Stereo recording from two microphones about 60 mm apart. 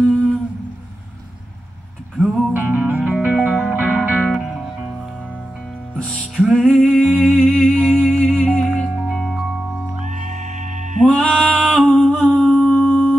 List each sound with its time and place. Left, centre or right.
0.0 s humming: centre
2.2 s music: centre
2.5 s music: right
4.3 s music: centre
5.9 s music: centre
11.1 s a sound: centre
12.1 s humming: centre